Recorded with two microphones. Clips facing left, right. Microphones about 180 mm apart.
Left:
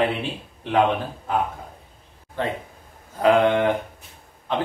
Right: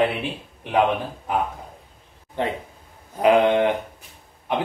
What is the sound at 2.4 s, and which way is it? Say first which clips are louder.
A man's voice: right 1 dB; 20° right (ahead or behind).